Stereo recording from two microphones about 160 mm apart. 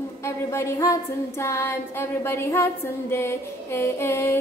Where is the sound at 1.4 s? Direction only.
15° left (ahead or behind).